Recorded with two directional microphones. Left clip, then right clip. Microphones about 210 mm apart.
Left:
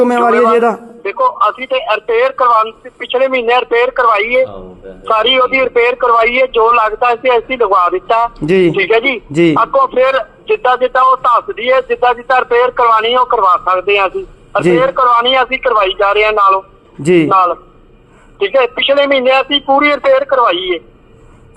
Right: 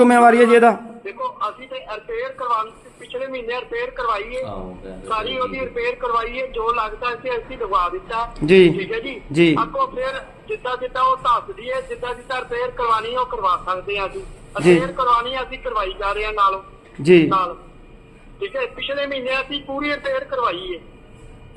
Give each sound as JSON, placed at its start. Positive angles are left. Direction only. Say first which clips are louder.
{"t": 0.3, "sound": "a man's voice", "louder": "left 2 dB", "side_deg": 5}
{"t": 1.0, "sound": "a man's voice", "louder": "left 14 dB", "side_deg": 30}
{"t": 8.4, "sound": "a man's voice", "louder": "right 1 dB", "side_deg": 5}
{"t": 8.7, "sound": "a man's voice", "louder": "left 14 dB", "side_deg": 25}